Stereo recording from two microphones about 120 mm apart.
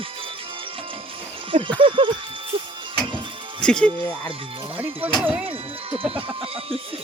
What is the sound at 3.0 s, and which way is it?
Music, 45° right (ahead or behind).